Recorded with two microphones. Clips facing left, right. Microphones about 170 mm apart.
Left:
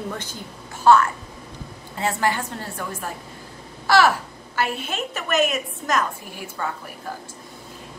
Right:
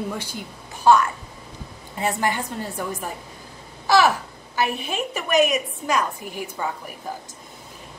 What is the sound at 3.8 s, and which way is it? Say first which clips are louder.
Babbling: even; 20° right (ahead or behind).